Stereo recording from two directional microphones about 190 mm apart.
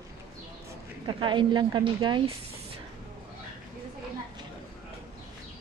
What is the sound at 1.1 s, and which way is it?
Speech, 25° right (ahead or behind).